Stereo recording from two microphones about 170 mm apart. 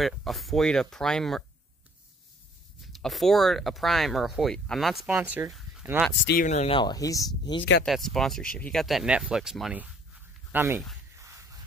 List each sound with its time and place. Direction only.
0.0 s speech: centre (ahead or behind)
2.8 s speech: centre (ahead or behind)
6.4 s speech: 45° left (ahead or behind)
6.7 s speech: 25° left (ahead or behind)
7.8 s speech: centre (ahead or behind)
11.1 s a sound: 15° right (ahead or behind)